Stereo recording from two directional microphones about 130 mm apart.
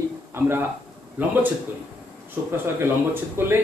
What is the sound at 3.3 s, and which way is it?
Speech, 20° right (ahead or behind).